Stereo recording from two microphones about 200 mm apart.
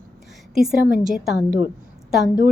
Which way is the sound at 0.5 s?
Centre (ahead or behind).